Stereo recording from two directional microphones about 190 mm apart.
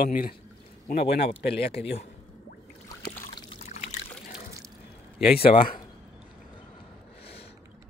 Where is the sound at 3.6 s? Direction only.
35° left (ahead or behind).